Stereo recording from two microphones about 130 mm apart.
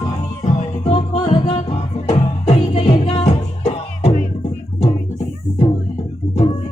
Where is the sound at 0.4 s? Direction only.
40° left (ahead or behind).